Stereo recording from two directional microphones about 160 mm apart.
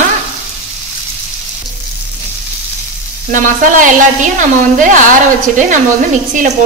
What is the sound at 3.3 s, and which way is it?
A woman's voice, 55° right (ahead or behind).